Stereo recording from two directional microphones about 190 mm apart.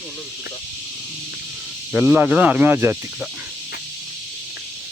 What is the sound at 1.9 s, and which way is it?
Speech, 5° right (ahead or behind).